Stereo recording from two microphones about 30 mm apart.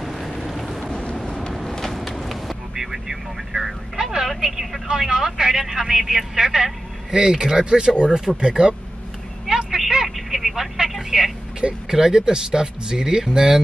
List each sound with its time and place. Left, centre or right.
0.0 s vehicle: centre
0.9 s vehicle: left
2.7 s vehicle: centre
4.8 s speech: centre
9.5 s vehicle: right
10.0 s telephone: centre
10.5 s vehicle: centre
11.9 s speech: centre